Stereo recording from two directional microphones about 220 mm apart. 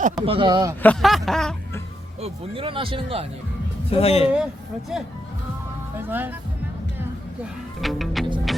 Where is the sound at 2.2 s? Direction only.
25° right (ahead or behind).